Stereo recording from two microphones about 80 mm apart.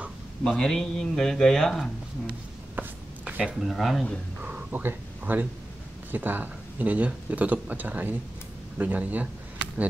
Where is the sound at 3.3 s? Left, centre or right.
Centre.